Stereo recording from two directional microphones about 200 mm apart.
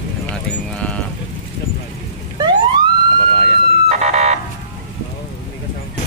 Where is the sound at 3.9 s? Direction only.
35° right (ahead or behind).